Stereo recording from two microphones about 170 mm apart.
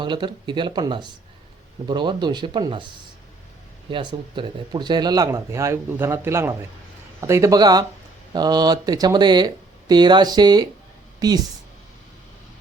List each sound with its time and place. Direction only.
0.0 s speech: 25° right (ahead or behind)
3.8 s speech: 30° right (ahead or behind)